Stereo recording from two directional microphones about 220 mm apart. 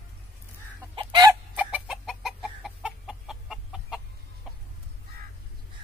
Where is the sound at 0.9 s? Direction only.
20° right (ahead or behind); by 4.0 s centre (ahead or behind).